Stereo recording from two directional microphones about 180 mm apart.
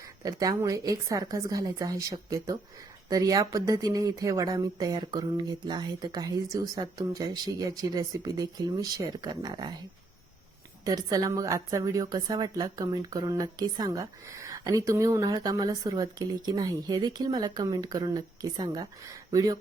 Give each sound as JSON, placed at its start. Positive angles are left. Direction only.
{"t": 0.2, "sound": "a woman's voice", "side_deg": -20}
{"t": 10.8, "sound": "a woman's voice", "side_deg": -20}